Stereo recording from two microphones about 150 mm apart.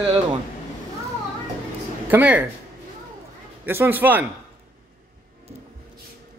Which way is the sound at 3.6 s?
15° right (ahead or behind).